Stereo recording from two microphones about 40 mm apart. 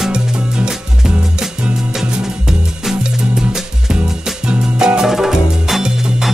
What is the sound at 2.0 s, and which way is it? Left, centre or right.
Music, centre.